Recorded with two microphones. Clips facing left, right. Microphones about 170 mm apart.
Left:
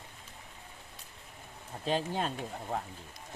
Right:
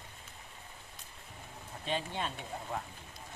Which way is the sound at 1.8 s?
40° left (ahead or behind).